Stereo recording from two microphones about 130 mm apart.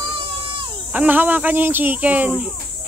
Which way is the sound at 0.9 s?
15° right (ahead or behind).